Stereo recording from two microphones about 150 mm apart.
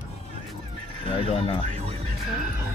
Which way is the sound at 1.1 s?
40° left (ahead or behind).